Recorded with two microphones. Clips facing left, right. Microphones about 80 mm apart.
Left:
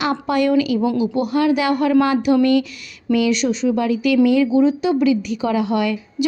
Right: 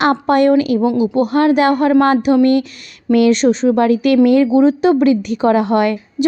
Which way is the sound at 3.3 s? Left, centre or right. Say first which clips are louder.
Right 6 dB; right.